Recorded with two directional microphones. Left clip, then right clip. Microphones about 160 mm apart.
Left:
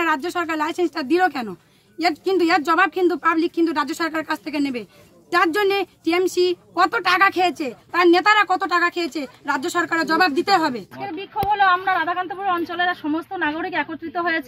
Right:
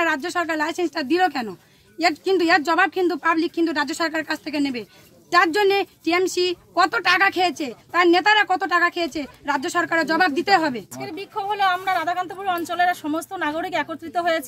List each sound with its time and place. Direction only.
0.0 s speech: centre (ahead or behind)
11.5 s speech: 25° right (ahead or behind)